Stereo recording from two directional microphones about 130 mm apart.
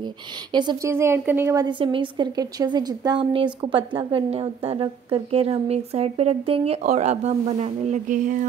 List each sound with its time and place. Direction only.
0.5 s a woman's voice: 35° right (ahead or behind)
0.8 s speech: 20° right (ahead or behind)
1.6 s a woman's voice: 40° right (ahead or behind)
6.8 s speech: 60° right (ahead or behind); by 8.5 s 85° right